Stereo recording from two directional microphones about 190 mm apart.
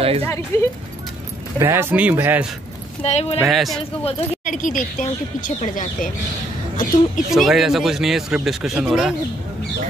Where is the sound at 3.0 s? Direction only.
35° left (ahead or behind).